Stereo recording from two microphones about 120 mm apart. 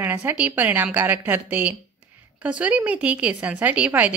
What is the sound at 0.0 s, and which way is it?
Speech, 15° right (ahead or behind).